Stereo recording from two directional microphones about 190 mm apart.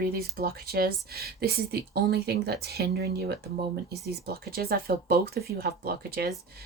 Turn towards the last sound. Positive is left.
turn(degrees=-55)  # may be behind; listen again after turning